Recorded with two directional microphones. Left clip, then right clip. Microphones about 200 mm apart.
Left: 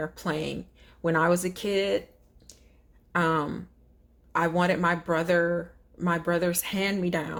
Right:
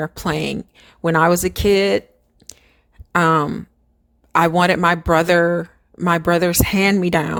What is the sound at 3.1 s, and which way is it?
A woman's voice, 35° right (ahead or behind).